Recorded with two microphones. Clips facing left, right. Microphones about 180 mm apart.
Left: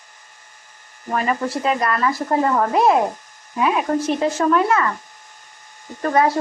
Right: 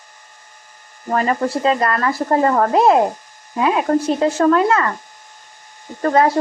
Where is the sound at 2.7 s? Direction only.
30° right (ahead or behind).